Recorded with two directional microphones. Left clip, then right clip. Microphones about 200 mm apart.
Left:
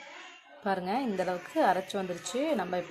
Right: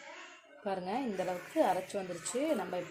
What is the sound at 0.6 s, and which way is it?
Speech, 10° left (ahead or behind).